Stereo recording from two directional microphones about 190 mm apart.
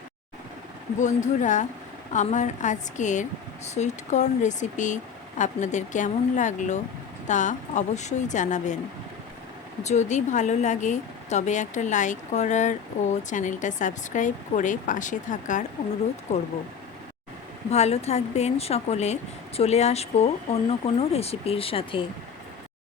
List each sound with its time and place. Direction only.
0.9 s speech: 40° left (ahead or behind)
9.8 s speech: 35° left (ahead or behind)
17.7 s speech: 35° left (ahead or behind)